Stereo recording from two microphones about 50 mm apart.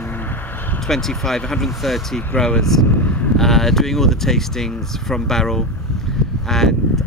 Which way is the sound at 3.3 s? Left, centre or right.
Centre.